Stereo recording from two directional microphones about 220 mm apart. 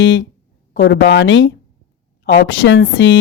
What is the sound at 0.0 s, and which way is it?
A woman's voice, 55° left (ahead or behind).